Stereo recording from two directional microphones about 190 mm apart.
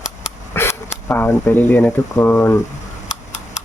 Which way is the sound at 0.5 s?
15° left (ahead or behind).